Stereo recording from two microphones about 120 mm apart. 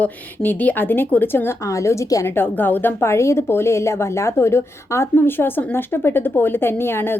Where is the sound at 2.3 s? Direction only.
15° left (ahead or behind).